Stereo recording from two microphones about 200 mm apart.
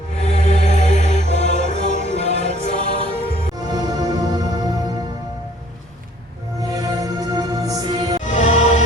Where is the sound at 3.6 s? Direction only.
20° right (ahead or behind).